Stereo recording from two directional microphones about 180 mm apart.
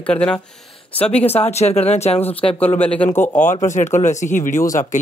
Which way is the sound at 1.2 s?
35° left (ahead or behind).